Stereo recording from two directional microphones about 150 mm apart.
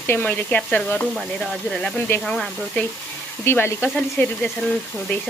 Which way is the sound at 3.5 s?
15° left (ahead or behind).